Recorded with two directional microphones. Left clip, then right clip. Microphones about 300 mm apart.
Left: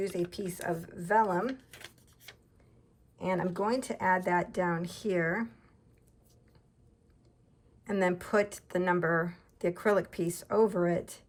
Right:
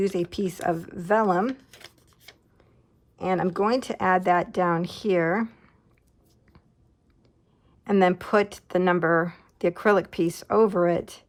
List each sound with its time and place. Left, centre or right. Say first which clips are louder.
0.3 s speech: right 9 dB; centre
1.7 s shuffling cards: right 2 dB; centre
3.3 s speech: right 8 dB; centre
7.9 s speech: right 9 dB; centre